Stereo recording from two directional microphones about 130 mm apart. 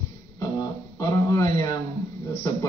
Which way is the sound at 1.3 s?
25° left (ahead or behind).